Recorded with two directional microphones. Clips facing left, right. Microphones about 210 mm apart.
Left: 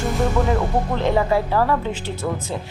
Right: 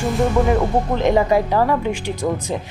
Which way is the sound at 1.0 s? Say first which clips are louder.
Right 3 dB; 15° right (ahead or behind).